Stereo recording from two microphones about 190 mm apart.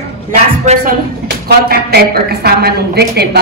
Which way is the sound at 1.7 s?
55° right (ahead or behind).